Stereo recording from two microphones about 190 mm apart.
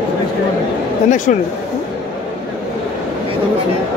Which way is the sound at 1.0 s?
40° left (ahead or behind).